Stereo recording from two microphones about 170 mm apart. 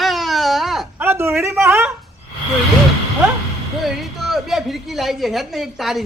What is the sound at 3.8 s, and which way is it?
A man's voice, centre (ahead or behind).